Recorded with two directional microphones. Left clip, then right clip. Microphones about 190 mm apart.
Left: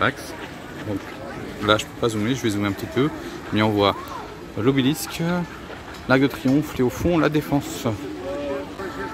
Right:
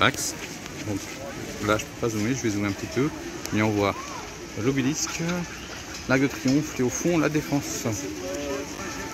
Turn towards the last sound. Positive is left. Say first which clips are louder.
# left 4 dB
turn(degrees=10)  # may be behind; listen again after turning